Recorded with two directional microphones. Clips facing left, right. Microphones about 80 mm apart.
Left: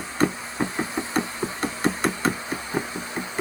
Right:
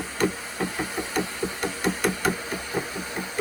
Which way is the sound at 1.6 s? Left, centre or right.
Left.